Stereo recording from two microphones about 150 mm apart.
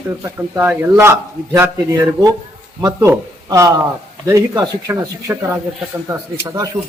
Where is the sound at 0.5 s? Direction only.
15° right (ahead or behind).